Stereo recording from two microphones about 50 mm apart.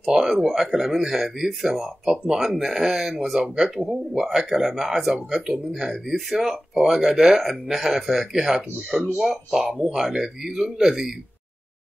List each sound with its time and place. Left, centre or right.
0.0 s speech: centre